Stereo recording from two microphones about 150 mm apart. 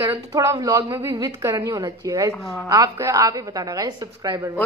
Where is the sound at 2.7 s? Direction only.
20° right (ahead or behind).